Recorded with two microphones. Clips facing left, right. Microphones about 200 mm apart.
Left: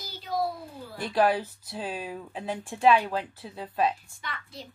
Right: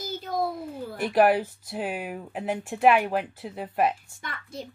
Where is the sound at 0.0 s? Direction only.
45° right (ahead or behind).